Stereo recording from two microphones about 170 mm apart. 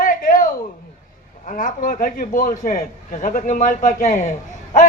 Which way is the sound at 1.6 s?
50° left (ahead or behind).